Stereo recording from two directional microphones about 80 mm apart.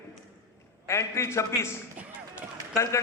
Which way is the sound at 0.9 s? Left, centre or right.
Left.